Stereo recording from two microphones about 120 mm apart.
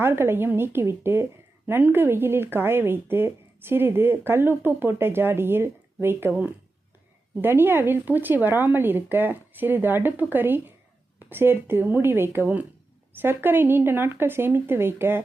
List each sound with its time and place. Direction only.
0.0 s a woman's voice: 20° right (ahead or behind)